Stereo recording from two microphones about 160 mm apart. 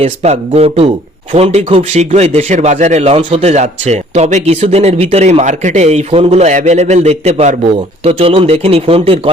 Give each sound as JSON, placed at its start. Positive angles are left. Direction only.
{"t": 0.0, "sound": "a man's voice", "side_deg": -40}